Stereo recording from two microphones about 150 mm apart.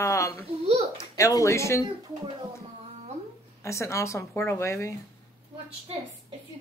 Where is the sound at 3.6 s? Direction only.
20° left (ahead or behind).